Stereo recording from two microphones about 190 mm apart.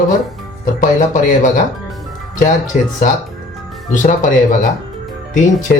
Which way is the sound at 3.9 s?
45° left (ahead or behind).